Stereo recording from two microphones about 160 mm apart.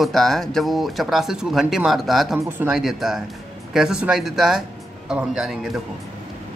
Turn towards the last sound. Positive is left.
turn(degrees=0)  # may be behind; listen again after turning